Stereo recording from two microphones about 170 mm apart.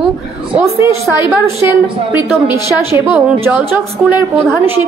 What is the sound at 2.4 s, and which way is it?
A woman's voice, 15° right (ahead or behind).